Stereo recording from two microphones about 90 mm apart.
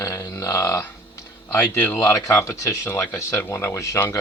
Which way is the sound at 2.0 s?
35° left (ahead or behind).